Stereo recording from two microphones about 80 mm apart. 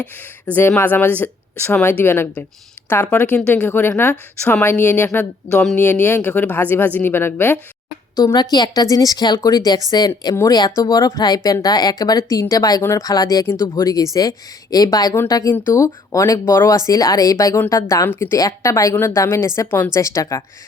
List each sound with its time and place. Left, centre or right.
0.0 s speech: centre
8.4 s speech: left
13.5 s a woman's voice: left
13.8 s a woman's voice: left
18.3 s a woman's voice: left